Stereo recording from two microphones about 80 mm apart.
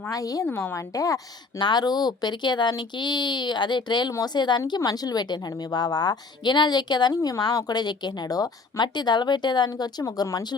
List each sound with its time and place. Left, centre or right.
0.1 s speech: left
0.5 s a woman's voice: left
0.8 s speech: left
1.5 s a woman's voice: left
4.8 s a woman's voice: left